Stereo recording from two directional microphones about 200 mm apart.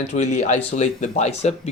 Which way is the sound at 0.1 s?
35° left (ahead or behind).